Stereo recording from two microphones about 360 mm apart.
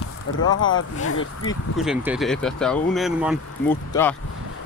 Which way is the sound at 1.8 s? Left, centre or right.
Centre.